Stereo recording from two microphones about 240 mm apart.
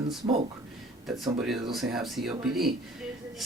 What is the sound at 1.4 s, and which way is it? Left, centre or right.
Speech, centre.